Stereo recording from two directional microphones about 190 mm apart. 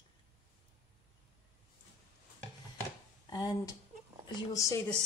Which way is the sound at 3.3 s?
20° left (ahead or behind).